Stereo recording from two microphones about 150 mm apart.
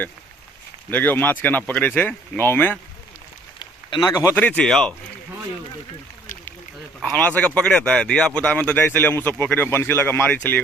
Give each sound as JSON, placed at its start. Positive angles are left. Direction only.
{"t": 0.9, "sound": "speech", "side_deg": 10}
{"t": 3.6, "sound": "a sound", "side_deg": 30}
{"t": 4.4, "sound": "speech", "side_deg": 10}
{"t": 7.0, "sound": "speech", "side_deg": 10}